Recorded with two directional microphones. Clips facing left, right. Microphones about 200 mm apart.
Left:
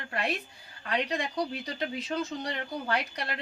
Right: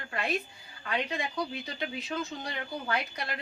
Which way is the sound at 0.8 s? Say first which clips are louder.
Left 2 dB; 35° left (ahead or behind).